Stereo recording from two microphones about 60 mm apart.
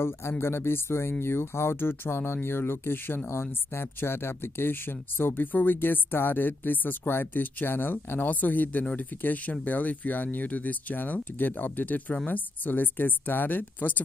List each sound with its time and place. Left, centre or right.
0.0 s speech: left